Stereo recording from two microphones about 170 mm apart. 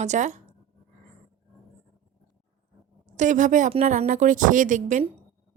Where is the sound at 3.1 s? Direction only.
45° right (ahead or behind).